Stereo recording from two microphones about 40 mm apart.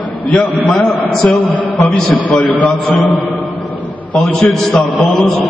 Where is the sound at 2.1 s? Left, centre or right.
Left.